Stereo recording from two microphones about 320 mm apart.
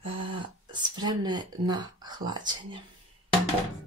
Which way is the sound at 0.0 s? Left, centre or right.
Centre.